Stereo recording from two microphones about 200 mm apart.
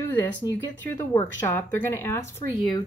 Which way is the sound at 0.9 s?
15° left (ahead or behind).